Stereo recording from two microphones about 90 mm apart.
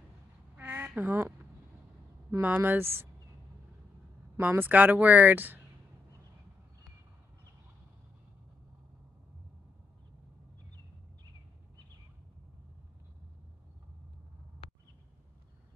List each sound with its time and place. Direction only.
0.6 s duck: 25° right (ahead or behind)
2.4 s speech: 20° right (ahead or behind)
4.4 s speech: 20° right (ahead or behind)